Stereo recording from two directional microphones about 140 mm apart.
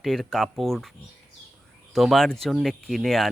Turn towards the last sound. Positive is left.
turn(degrees=0)  # may be behind; listen again after turning